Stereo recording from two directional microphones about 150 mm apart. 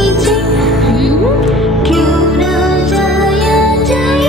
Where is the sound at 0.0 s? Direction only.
Centre (ahead or behind).